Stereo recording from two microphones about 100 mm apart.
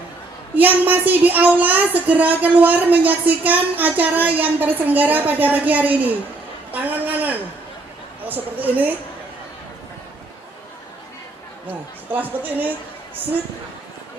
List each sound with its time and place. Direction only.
0.9 s speech: 15° right (ahead or behind)
12.1 s speech: 20° right (ahead or behind)